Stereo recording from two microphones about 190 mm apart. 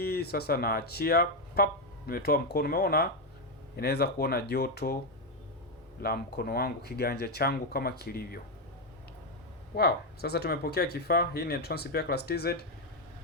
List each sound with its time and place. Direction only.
0.0 s speech: 55° left (ahead or behind)
6.0 s speech: 55° left (ahead or behind)
9.7 s speech: 55° left (ahead or behind)